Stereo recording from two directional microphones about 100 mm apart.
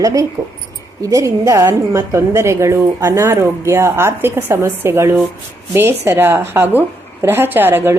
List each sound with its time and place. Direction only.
0.0 s a woman's voice: 35° right (ahead or behind)